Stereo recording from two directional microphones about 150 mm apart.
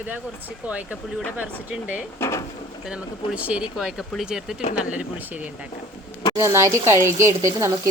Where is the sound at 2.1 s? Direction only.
20° left (ahead or behind).